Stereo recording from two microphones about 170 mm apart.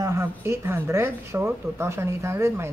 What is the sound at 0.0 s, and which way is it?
Speech, 15° right (ahead or behind).